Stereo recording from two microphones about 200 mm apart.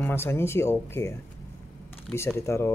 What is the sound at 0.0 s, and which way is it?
Speech, 10° left (ahead or behind).